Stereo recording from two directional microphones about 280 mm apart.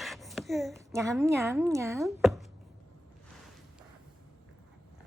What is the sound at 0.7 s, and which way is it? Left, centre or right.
A woman's voice, centre.